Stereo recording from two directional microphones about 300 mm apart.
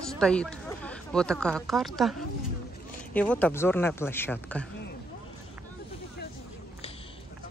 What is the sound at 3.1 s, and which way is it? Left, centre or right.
Speech, centre.